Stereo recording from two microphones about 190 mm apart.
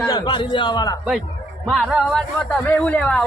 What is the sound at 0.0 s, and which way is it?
Speech, 25° left (ahead or behind).